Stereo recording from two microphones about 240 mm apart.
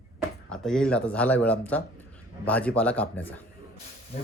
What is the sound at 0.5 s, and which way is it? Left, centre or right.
Speech, centre.